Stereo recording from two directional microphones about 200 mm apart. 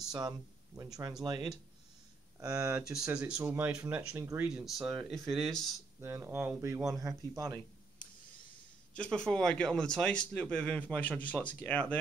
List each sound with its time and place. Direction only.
0.1 s speech: 20° right (ahead or behind)
2.4 s speech: 5° right (ahead or behind)
5.9 s speech: 15° right (ahead or behind)
8.9 s speech: 5° left (ahead or behind)